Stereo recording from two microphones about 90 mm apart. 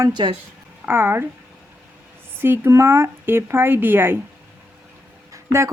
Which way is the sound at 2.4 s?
25° right (ahead or behind).